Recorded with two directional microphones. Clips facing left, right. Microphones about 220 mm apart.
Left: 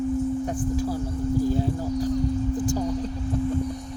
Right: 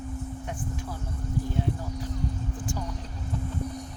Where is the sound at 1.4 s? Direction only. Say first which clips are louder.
Left 7 dB; 35° left (ahead or behind).